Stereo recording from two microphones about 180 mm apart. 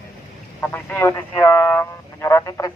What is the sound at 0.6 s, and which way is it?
Speech, 10° left (ahead or behind).